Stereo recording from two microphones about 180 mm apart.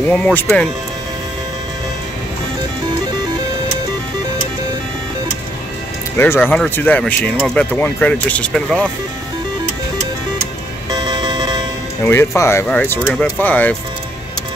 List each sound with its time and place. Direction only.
0.1 s speech: 10° left (ahead or behind)
6.1 s speech: 15° left (ahead or behind)
10.9 s music: 25° right (ahead or behind)
12.0 s speech: 15° left (ahead or behind)